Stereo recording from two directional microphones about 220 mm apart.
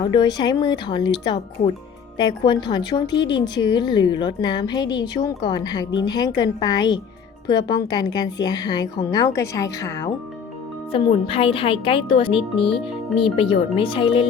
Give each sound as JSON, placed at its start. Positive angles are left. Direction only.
{"t": 0.0, "sound": "a woman's voice", "side_deg": 20}
{"t": 10.9, "sound": "speech", "side_deg": 25}